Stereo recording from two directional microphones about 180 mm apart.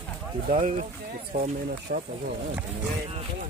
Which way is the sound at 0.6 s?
45° right (ahead or behind).